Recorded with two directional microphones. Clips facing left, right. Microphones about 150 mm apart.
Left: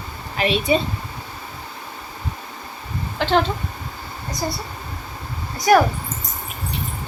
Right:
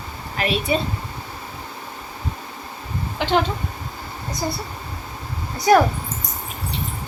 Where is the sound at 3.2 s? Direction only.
15° right (ahead or behind).